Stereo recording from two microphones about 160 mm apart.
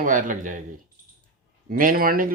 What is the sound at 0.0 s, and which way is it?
Speech, 55° right (ahead or behind).